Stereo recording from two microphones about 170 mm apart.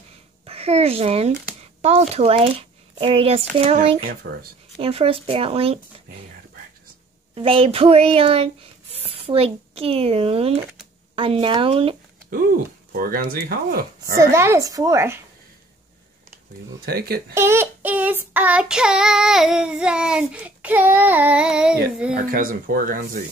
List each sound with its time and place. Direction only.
0.5 s speech: 35° right (ahead or behind)
7.3 s speech: 35° right (ahead or behind)
12.9 s speech: 60° right (ahead or behind)
14.1 s a woman's voice: 15° right (ahead or behind)
16.8 s speech: 65° right (ahead or behind)
17.3 s child singing: 15° right (ahead or behind)
22.3 s speech: 60° right (ahead or behind)